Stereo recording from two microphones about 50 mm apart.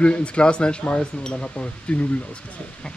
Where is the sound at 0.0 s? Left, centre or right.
Left.